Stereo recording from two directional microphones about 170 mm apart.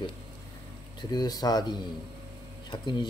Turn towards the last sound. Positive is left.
turn(degrees=25)  # may be behind; listen again after turning